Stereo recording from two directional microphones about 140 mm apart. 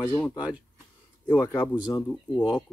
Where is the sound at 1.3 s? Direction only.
10° left (ahead or behind).